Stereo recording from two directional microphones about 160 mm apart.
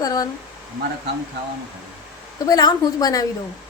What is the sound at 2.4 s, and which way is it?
Speech, 25° left (ahead or behind).